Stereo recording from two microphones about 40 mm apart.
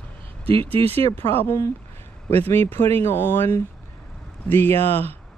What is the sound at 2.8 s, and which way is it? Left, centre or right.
Speech, left.